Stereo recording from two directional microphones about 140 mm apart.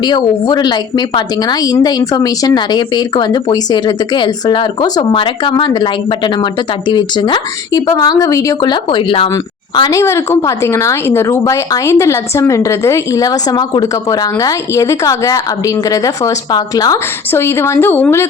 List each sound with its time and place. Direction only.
0.0 s a woman's voice: 30° left (ahead or behind)
9.9 s a woman's voice: 20° left (ahead or behind)